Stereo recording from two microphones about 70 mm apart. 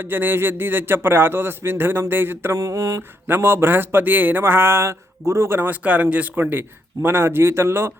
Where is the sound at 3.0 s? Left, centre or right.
Right.